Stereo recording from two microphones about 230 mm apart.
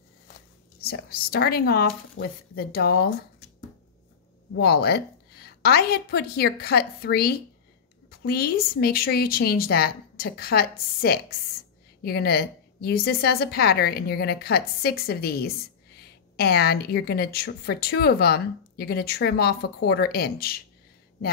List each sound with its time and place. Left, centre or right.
0.7 s a woman's voice: left
2.2 s speech: left
2.5 s speech: left
4.6 s a woman's voice: left